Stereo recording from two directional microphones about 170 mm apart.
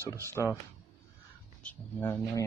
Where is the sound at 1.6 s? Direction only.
10° left (ahead or behind).